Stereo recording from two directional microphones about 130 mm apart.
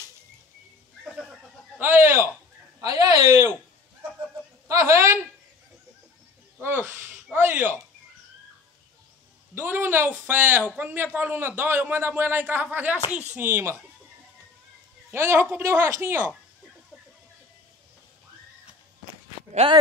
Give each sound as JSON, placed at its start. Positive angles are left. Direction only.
{"t": 1.1, "sound": "neigh", "side_deg": 0}
{"t": 1.8, "sound": "a man's voice", "side_deg": -15}
{"t": 4.6, "sound": "a woman's voice", "side_deg": -20}
{"t": 6.6, "sound": "a man's voice", "side_deg": -15}
{"t": 9.6, "sound": "a man's voice", "side_deg": -15}
{"t": 15.0, "sound": "a man's voice", "side_deg": -15}
{"t": 19.6, "sound": "speech", "side_deg": -40}